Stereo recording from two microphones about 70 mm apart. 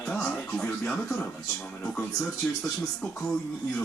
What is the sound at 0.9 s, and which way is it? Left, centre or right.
A man's voice, centre.